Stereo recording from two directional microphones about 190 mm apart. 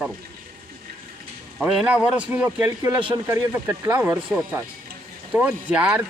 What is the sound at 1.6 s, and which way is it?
A man's voice, 5° right (ahead or behind).